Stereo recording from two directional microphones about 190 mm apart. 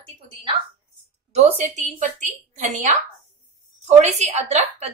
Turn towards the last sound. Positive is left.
turn(degrees=-35)  # may be behind; listen again after turning